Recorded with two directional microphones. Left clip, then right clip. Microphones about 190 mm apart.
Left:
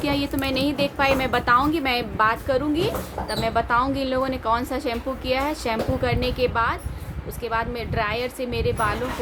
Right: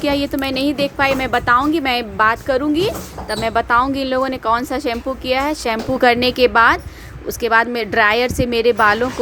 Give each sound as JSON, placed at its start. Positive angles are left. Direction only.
{"t": 0.0, "sound": "a woman's voice", "side_deg": -35}